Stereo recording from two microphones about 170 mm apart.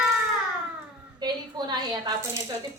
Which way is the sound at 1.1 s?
25° right (ahead or behind).